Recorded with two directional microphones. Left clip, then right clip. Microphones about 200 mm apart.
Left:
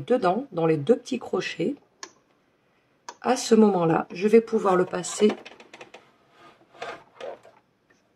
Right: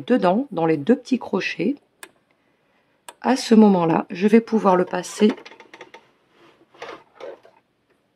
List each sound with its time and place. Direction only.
0.0 s speech: 45° right (ahead or behind)
3.2 s speech: 45° right (ahead or behind)